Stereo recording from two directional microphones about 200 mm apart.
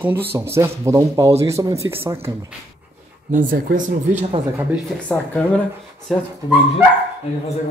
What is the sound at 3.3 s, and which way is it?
Speech, 40° right (ahead or behind).